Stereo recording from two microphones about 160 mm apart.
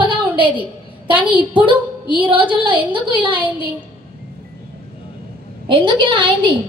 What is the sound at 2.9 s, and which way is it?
Speech, 30° right (ahead or behind).